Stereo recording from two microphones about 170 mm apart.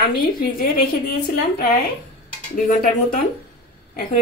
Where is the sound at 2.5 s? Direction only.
50° left (ahead or behind).